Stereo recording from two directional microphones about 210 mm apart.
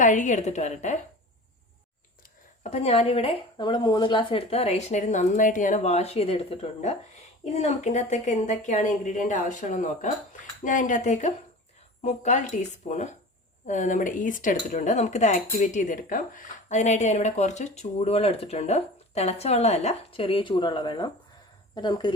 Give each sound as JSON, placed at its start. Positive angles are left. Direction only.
{"t": 0.0, "sound": "speech", "side_deg": 35}
{"t": 2.6, "sound": "speech", "side_deg": 30}